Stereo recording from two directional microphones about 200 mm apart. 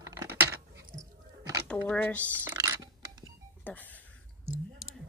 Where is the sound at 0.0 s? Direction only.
15° right (ahead or behind).